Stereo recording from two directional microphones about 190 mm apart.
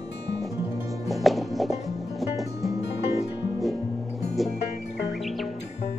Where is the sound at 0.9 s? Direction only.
Centre (ahead or behind).